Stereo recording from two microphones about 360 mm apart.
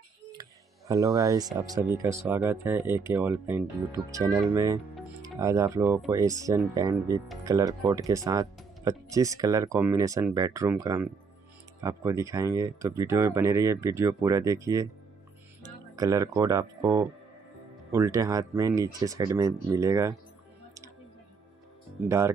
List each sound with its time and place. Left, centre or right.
0.3 s speech: centre
22.0 s speech: centre